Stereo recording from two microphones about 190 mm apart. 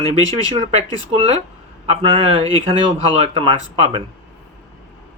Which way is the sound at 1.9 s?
30° right (ahead or behind).